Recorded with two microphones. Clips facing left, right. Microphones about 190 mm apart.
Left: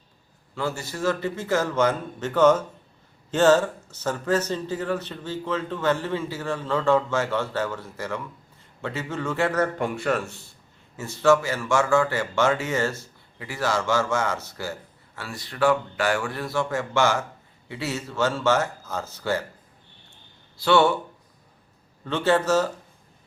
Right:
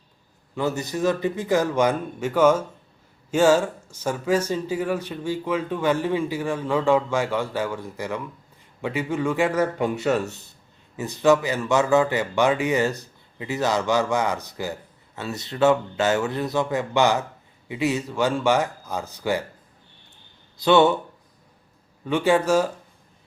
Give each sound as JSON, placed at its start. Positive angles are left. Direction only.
{"t": 0.5, "sound": "speech", "side_deg": -20}
{"t": 20.6, "sound": "speech", "side_deg": -20}
{"t": 22.0, "sound": "speech", "side_deg": -10}